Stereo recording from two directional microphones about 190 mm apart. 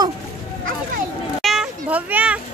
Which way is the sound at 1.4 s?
5° right (ahead or behind).